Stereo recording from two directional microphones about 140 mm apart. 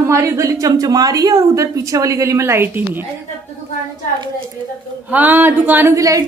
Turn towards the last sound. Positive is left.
turn(degrees=-25)  # may be behind; listen again after turning